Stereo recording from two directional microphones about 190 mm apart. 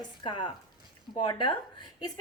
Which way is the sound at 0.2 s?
25° left (ahead or behind).